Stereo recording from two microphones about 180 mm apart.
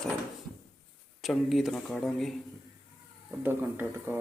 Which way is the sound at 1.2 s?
Centre (ahead or behind).